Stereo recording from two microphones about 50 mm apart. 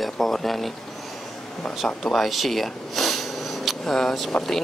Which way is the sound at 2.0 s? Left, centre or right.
Centre.